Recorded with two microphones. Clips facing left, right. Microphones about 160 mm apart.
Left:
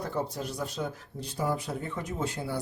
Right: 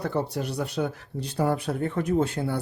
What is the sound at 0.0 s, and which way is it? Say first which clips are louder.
Speech: right 5 dB; 70° right (ahead or behind).